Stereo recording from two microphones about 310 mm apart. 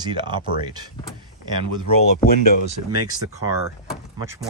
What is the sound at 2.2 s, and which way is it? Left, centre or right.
Speech, left.